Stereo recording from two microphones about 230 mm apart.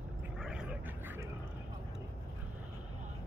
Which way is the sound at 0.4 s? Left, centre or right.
Centre.